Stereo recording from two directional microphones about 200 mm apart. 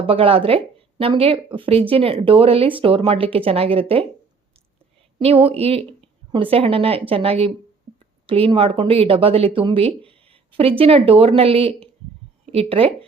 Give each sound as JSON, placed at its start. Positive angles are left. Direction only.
{"t": 0.0, "sound": "speech", "side_deg": -30}
{"t": 5.2, "sound": "speech", "side_deg": -30}